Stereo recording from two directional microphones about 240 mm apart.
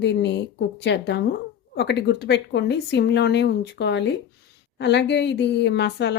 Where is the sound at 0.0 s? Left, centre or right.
Left.